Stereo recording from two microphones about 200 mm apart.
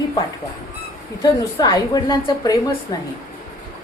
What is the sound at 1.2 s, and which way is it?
A woman's voice, 20° left (ahead or behind).